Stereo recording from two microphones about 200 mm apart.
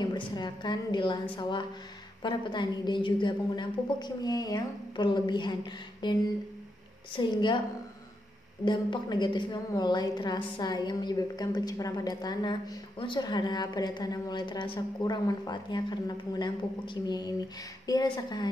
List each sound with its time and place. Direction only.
0.0 s a woman's voice: 20° left (ahead or behind)
7.2 s a woman's voice: 25° left (ahead or behind)
8.6 s a woman's voice: 20° left (ahead or behind)